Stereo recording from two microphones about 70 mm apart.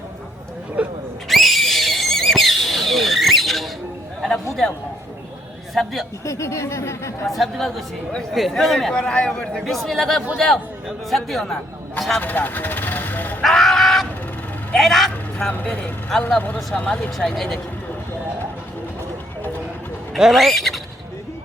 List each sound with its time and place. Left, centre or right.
0.8 s speech: centre
1.3 s neigh: centre
5.7 s a man's voice: centre
6.2 s speech: left
7.3 s a man's voice: centre
12.2 s vehicle: left
13.4 s a sound: centre
14.8 s a man's voice: centre
15.4 s speech: left
17.2 s a man's voice: centre
20.1 s a man's voice: centre